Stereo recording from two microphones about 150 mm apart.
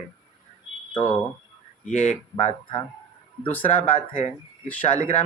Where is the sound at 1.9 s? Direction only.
55° left (ahead or behind).